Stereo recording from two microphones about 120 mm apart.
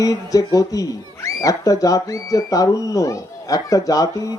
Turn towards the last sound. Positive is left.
turn(degrees=30)  # may be behind; listen again after turning